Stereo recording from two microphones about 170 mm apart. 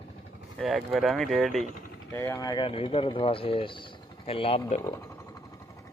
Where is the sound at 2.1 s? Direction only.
15° left (ahead or behind); by 4.6 s 35° left (ahead or behind).